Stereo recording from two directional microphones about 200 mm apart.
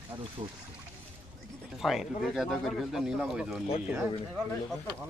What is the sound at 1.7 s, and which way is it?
Speech, centre (ahead or behind).